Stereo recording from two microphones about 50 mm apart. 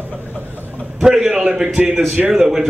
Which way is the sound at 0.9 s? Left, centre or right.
Centre.